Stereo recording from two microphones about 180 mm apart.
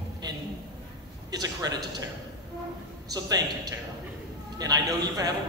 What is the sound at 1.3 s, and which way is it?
Speech, 20° right (ahead or behind).